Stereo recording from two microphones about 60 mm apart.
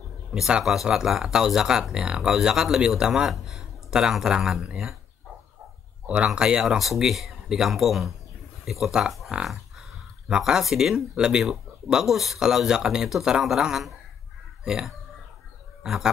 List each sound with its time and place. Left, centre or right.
0.3 s speech: centre
3.3 s speech: centre
6.0 s speech: centre
9.3 s a sound: centre
10.3 s speech: centre
15.8 s bird: centre